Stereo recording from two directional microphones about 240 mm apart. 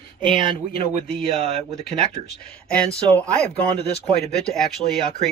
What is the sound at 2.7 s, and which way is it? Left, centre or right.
Speech, centre.